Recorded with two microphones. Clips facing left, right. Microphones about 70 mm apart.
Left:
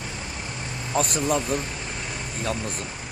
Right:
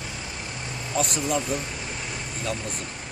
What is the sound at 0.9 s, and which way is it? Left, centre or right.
Speech, left.